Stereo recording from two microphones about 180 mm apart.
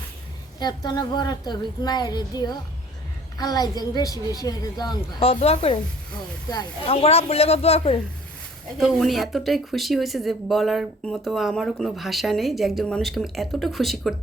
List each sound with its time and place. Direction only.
0.6 s a woman's voice: 25° left (ahead or behind)
6.5 s a woman's voice: 20° left (ahead or behind)
6.9 s a man's voice: 35° left (ahead or behind)
8.8 s speech: centre (ahead or behind)